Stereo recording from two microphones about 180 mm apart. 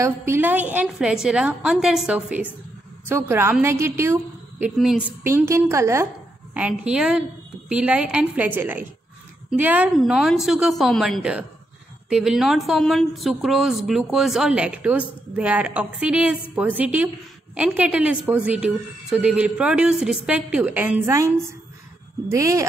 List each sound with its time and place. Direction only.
0.0 s a woman's voice: 15° right (ahead or behind)
22.3 s a woman's voice: 15° right (ahead or behind)